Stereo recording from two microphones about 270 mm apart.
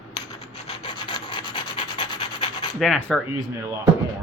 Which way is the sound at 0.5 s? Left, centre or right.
Left.